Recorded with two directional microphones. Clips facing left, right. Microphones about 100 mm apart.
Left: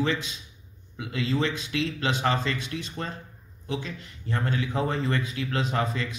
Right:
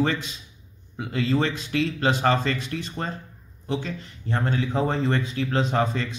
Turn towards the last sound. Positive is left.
turn(degrees=-30)  # may be behind; listen again after turning